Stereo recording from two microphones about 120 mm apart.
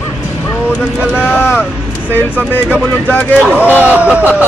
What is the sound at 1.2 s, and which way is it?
Speech, 20° left (ahead or behind).